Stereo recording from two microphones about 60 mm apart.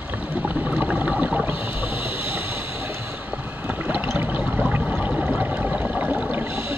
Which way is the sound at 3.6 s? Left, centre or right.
Right.